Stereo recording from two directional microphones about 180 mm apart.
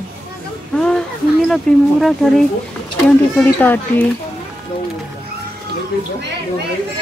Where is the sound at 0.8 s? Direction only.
5° left (ahead or behind).